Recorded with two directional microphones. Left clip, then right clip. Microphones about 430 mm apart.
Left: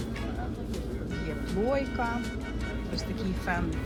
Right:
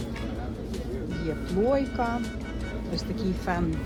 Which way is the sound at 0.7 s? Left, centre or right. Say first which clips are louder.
Right 2 dB; centre.